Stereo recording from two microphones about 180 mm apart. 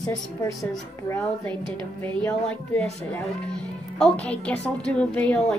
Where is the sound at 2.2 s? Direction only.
5° left (ahead or behind).